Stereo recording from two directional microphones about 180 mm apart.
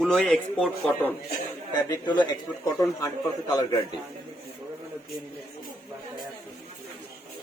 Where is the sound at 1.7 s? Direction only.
25° left (ahead or behind).